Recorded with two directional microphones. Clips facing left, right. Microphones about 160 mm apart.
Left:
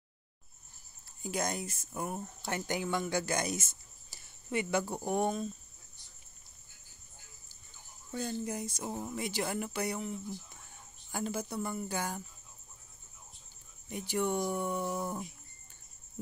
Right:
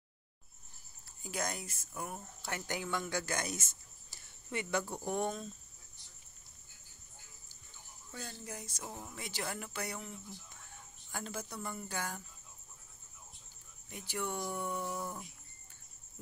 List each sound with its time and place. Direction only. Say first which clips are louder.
1.2 s speech: left 5 dB; 20° left (ahead or behind)
8.1 s speech: left 10 dB; 20° left (ahead or behind)
13.8 s speech: left 7 dB; 20° left (ahead or behind)